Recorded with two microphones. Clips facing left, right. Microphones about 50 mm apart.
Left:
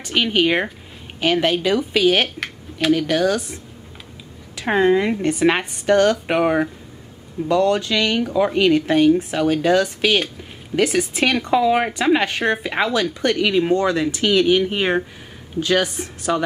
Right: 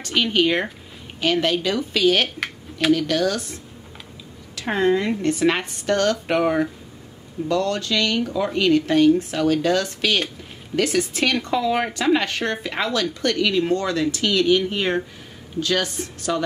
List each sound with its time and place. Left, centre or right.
0.0 s a woman's voice: centre
2.2 s a sound: centre
2.9 s speech: centre
4.6 s a woman's voice: centre